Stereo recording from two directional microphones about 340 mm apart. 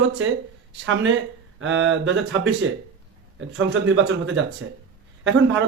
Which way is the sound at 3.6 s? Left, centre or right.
Right.